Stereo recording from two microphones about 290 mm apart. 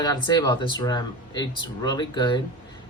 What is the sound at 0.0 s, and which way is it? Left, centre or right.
Speech, centre.